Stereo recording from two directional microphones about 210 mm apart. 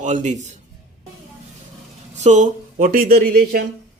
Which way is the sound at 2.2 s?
35° right (ahead or behind).